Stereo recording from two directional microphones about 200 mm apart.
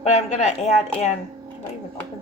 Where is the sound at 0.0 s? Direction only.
30° left (ahead or behind).